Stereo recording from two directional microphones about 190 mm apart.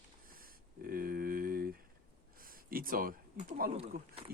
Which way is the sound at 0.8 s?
50° right (ahead or behind).